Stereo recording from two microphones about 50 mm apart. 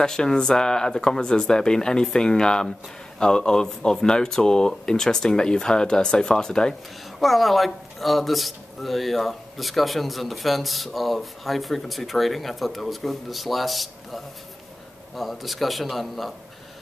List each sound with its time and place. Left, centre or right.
0.0 s speech: centre
7.2 s speech: centre